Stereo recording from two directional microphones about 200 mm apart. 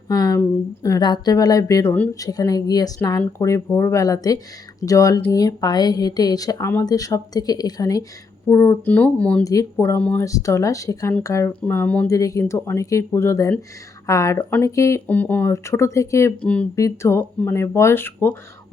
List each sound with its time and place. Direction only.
0.1 s speech: 20° left (ahead or behind)